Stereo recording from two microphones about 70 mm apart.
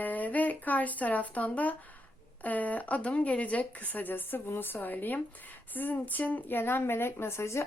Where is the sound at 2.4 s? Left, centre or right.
Left.